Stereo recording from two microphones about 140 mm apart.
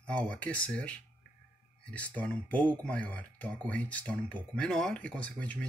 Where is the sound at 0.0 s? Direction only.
10° left (ahead or behind).